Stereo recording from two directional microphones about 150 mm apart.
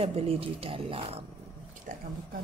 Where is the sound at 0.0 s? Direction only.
40° right (ahead or behind).